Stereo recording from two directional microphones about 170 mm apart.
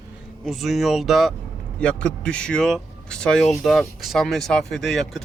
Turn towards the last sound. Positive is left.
turn(degrees=0)  # may be behind; listen again after turning